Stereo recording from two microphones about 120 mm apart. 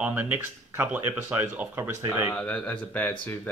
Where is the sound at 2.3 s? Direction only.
10° left (ahead or behind).